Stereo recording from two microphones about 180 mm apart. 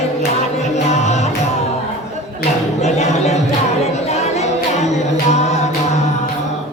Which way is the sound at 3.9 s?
35° left (ahead or behind).